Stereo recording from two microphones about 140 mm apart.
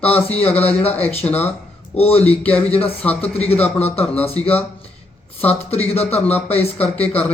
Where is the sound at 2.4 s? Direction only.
10° left (ahead or behind).